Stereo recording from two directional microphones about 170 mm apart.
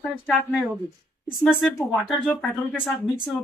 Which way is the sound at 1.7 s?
Centre (ahead or behind).